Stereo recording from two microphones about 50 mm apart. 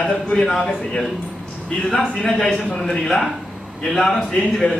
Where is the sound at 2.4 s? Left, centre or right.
Left.